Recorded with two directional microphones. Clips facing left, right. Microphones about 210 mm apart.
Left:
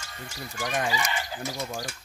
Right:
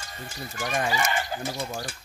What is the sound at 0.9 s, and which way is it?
Speech, 50° right (ahead or behind).